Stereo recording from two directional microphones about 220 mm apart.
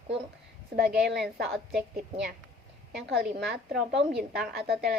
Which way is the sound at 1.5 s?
Centre (ahead or behind).